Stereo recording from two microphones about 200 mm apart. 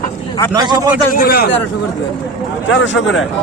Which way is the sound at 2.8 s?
65° left (ahead or behind).